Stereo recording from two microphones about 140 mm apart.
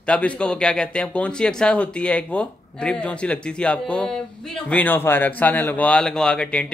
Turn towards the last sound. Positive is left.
turn(degrees=5)  # may be behind; listen again after turning